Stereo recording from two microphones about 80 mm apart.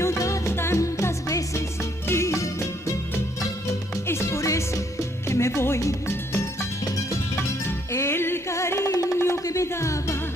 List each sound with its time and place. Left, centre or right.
0.0 s music: left
4.1 s music: left
7.9 s music: left